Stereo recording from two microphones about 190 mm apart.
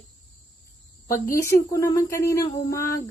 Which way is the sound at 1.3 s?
15° left (ahead or behind).